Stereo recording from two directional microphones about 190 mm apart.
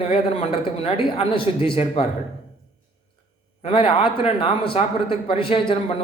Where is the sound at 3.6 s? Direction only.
30° left (ahead or behind).